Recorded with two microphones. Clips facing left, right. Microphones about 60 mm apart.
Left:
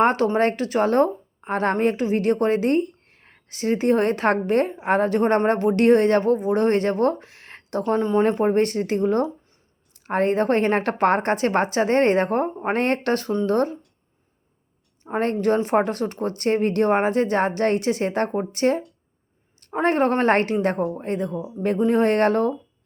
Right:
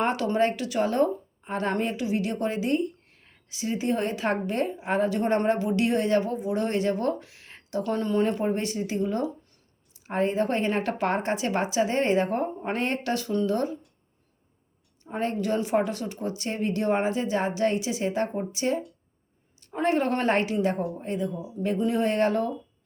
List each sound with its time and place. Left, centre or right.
0.0 s a woman's voice: left
7.9 s speech: left
8.2 s a woman's voice: left
15.0 s a woman's voice: left